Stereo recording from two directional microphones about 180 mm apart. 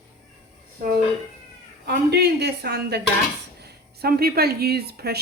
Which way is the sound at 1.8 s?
65° right (ahead or behind).